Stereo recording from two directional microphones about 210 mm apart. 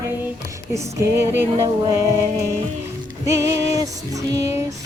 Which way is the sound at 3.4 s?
15° right (ahead or behind).